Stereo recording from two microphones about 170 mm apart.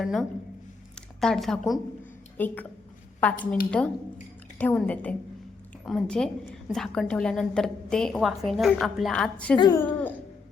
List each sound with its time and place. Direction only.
0.0 s a woman's voice: centre (ahead or behind)
9.6 s speech: 20° left (ahead or behind)